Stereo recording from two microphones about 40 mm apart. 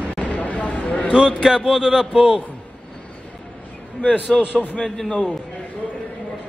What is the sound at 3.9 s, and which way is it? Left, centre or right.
Speech, left.